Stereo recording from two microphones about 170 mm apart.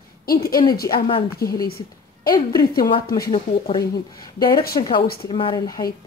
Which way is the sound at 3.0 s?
65° left (ahead or behind).